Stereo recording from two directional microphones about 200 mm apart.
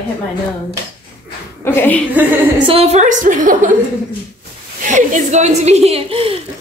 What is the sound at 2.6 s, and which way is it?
A woman's voice, 30° right (ahead or behind).